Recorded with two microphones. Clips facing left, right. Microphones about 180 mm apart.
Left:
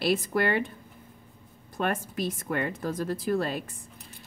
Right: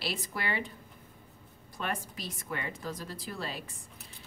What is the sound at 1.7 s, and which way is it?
A woman's voice, 55° left (ahead or behind).